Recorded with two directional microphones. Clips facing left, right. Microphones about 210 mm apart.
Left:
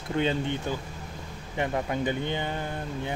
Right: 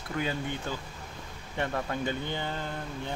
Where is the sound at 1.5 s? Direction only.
15° left (ahead or behind).